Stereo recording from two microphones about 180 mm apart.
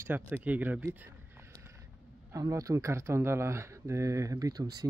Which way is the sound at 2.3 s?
20° right (ahead or behind).